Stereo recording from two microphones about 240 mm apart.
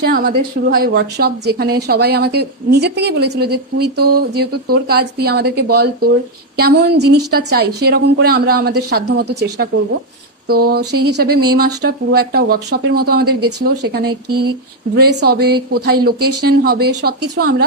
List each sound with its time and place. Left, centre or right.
0.0 s a woman's voice: right
10.8 s speech: right
11.1 s speech: right